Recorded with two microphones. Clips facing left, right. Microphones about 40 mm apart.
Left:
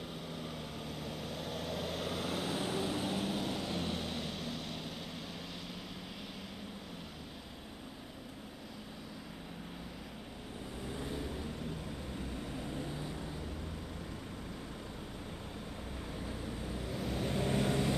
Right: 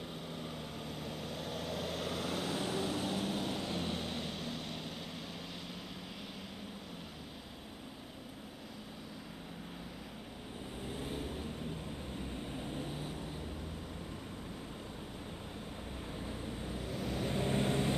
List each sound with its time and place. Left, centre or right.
0.3 s vehicle: centre
10.9 s vehicle: right
12.4 s vehicle: right
16.1 s vehicle: centre